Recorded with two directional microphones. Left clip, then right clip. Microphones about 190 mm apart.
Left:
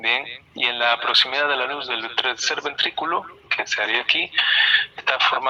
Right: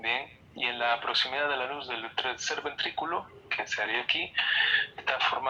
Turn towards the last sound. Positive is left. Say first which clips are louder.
# left 9 dB
turn(degrees=35)  # may be behind; listen again after turning